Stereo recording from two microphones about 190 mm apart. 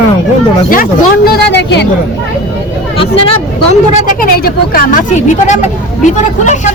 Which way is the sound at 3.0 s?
30° left (ahead or behind).